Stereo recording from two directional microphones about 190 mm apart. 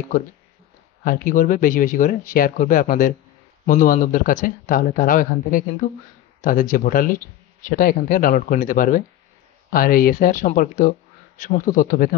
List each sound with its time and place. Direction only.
1.0 s speech: 45° left (ahead or behind)